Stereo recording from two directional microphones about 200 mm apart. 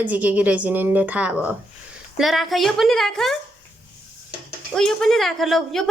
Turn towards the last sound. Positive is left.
turn(degrees=0)  # may be behind; listen again after turning